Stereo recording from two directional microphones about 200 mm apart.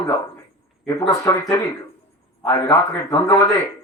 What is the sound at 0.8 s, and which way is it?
A man's voice, 15° left (ahead or behind).